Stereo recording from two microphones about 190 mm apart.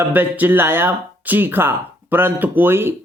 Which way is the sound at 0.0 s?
10° right (ahead or behind).